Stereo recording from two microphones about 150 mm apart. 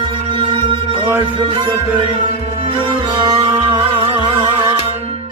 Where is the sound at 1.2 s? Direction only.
30° right (ahead or behind).